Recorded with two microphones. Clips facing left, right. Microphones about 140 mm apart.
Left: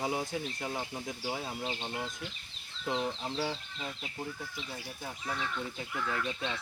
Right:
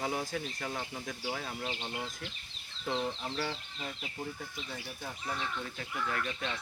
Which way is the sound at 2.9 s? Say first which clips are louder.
Left 1 dB; 15° left (ahead or behind).